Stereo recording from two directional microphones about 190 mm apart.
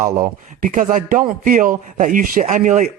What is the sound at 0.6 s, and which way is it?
A man's voice, 45° right (ahead or behind).